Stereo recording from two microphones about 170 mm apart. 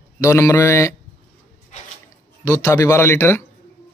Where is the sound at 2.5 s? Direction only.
20° left (ahead or behind).